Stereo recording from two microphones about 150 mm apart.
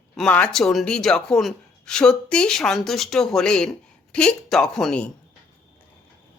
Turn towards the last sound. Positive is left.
turn(degrees=5)  # may be behind; listen again after turning